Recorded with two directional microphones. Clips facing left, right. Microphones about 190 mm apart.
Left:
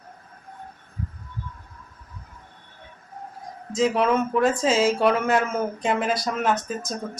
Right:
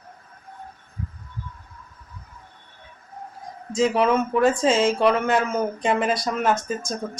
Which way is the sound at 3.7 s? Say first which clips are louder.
Right 1 dB; centre (ahead or behind).